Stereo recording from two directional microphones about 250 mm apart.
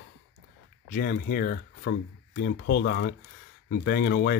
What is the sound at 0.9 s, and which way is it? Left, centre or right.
Speech, left.